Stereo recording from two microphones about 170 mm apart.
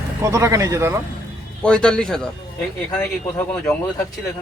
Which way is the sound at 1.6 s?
5° left (ahead or behind).